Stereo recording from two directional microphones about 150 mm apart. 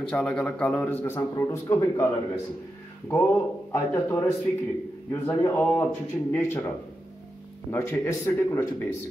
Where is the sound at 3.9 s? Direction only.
10° left (ahead or behind).